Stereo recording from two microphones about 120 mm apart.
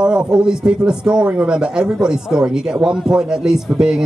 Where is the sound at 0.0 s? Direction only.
5° right (ahead or behind).